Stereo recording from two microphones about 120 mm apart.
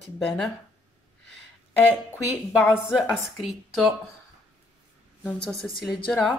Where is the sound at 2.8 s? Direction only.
5° right (ahead or behind).